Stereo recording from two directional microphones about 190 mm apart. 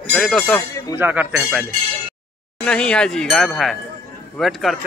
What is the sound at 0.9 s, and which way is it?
Speech, 10° right (ahead or behind).